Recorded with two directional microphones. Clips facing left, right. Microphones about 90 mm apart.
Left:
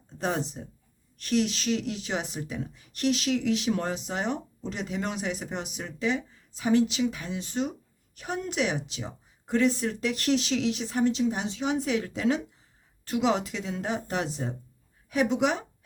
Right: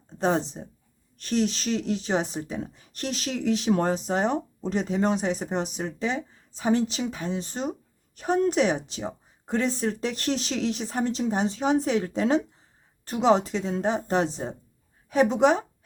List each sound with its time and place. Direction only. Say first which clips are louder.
0.2 s speech: right 5 dB; 35° right (ahead or behind)